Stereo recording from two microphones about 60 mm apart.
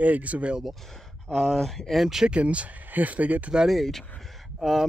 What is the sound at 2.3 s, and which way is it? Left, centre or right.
Speech, right.